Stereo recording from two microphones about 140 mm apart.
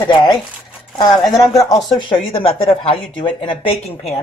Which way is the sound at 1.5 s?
Centre (ahead or behind).